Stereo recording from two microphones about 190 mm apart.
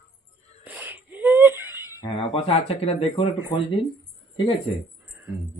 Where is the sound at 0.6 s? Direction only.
10° right (ahead or behind).